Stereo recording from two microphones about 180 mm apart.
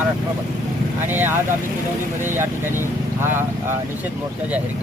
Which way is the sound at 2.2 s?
10° right (ahead or behind).